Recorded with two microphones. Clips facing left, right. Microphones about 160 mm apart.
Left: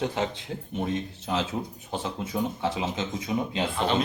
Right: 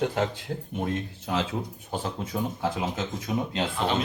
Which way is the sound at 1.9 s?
5° right (ahead or behind).